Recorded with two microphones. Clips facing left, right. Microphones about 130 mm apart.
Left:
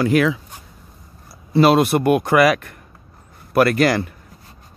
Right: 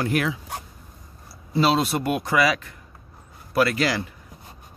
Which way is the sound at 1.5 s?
60° left (ahead or behind).